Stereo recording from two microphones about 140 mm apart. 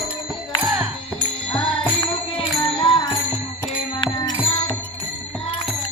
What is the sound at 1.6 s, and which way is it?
Music, 40° left (ahead or behind).